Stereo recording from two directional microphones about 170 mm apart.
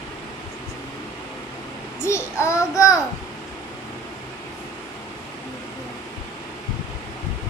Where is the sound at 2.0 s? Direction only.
15° left (ahead or behind).